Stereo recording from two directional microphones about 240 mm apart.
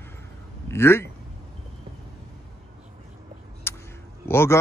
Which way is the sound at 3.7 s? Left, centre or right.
Centre.